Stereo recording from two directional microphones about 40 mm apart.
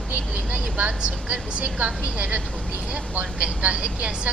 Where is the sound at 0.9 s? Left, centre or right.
Right.